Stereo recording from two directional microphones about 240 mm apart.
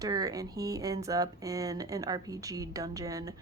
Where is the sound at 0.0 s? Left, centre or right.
Centre.